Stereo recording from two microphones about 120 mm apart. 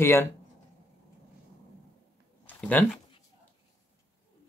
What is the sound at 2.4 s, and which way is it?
Speech, 10° left (ahead or behind).